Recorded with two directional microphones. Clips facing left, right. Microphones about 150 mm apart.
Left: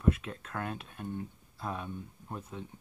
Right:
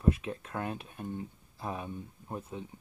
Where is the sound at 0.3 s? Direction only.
20° right (ahead or behind).